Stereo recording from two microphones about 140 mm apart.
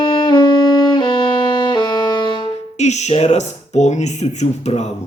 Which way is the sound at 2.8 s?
55° left (ahead or behind).